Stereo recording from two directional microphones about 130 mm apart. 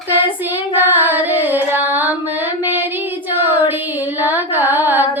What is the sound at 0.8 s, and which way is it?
Music, 15° right (ahead or behind).